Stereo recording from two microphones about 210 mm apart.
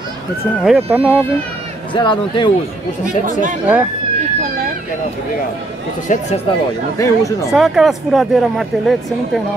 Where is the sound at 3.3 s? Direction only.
40° right (ahead or behind).